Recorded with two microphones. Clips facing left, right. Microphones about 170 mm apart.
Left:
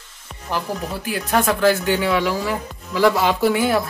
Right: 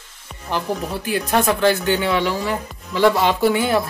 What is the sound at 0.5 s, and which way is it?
Speech, 5° left (ahead or behind).